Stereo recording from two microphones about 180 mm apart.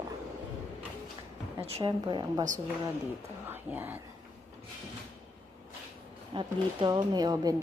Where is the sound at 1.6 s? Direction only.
30° right (ahead or behind).